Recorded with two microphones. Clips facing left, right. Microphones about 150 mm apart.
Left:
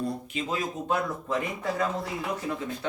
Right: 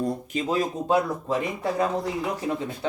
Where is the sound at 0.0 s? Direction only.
35° right (ahead or behind).